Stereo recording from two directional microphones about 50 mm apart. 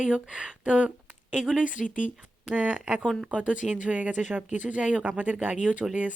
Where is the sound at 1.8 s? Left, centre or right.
Centre.